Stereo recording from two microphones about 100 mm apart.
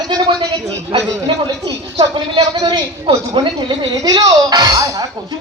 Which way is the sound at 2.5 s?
40° right (ahead or behind).